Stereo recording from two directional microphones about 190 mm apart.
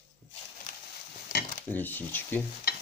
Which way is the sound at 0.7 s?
40° left (ahead or behind).